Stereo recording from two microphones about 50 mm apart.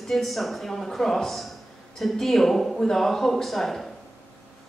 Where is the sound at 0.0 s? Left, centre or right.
Centre.